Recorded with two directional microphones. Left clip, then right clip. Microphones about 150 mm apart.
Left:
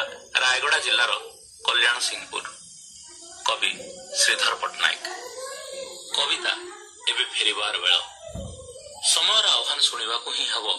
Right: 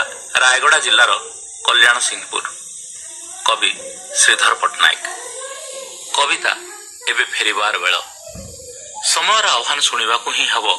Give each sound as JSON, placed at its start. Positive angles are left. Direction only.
{"t": 0.0, "sound": "a man's voice", "side_deg": -30}
{"t": 5.8, "sound": "a sound", "side_deg": -15}
{"t": 7.1, "sound": "speech", "side_deg": -25}
{"t": 9.2, "sound": "speech", "side_deg": -15}